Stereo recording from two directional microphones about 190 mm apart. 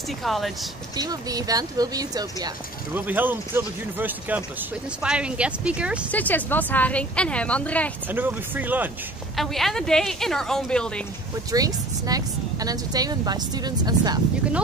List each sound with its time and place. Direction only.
0.2 s speech: centre (ahead or behind)
0.9 s speech: 20° right (ahead or behind)
2.9 s speech: 10° right (ahead or behind)
6.1 s speech: 10° left (ahead or behind)
8.1 s speech: 10° right (ahead or behind)
9.4 s speech: centre (ahead or behind)
11.5 s speech: 20° right (ahead or behind)